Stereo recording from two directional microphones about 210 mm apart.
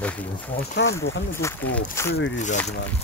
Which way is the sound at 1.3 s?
10° left (ahead or behind).